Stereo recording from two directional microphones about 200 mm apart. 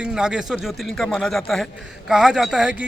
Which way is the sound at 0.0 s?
5° right (ahead or behind).